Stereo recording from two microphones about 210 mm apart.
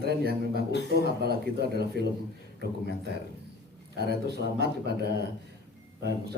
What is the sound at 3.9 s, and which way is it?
A man's voice, 50° right (ahead or behind).